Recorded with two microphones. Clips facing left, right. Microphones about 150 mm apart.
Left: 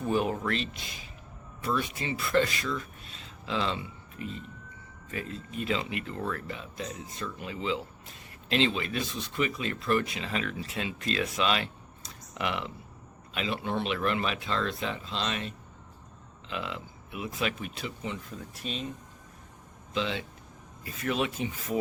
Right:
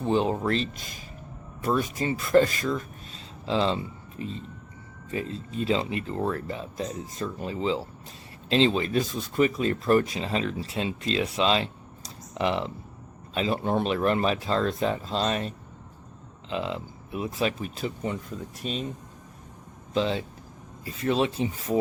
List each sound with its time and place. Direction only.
0.0 s speech: 25° right (ahead or behind); by 18.2 s 45° right (ahead or behind)
19.9 s speech: 35° right (ahead or behind)